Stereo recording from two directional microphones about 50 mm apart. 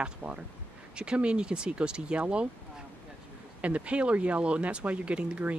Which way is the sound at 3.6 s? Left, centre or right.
Right.